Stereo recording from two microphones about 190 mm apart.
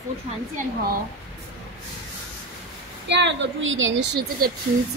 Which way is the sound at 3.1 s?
70° right (ahead or behind).